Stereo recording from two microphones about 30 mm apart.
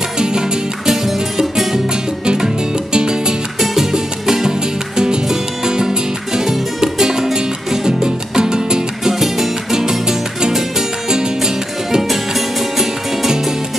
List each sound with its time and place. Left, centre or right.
0.2 s music: right
0.8 s music: centre
2.3 s music: right
3.5 s music: centre
12.0 s music: centre